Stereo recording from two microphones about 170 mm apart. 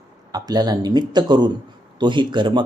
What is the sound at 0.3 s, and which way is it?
Speech, 25° right (ahead or behind).